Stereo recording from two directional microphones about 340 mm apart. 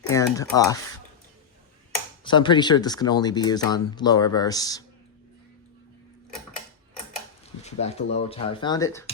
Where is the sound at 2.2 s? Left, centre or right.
Centre.